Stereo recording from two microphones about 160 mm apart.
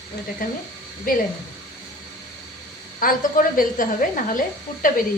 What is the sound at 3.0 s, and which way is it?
A woman's voice, 60° left (ahead or behind).